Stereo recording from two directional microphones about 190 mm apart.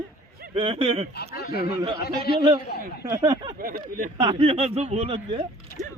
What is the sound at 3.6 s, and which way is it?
Speech, 45° right (ahead or behind).